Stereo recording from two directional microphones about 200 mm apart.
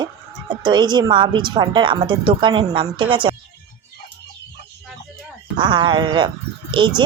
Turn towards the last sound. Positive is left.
turn(degrees=-25)  # may be behind; listen again after turning